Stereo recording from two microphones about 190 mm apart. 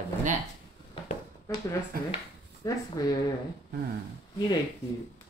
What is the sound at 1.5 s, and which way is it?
Speech, 20° left (ahead or behind).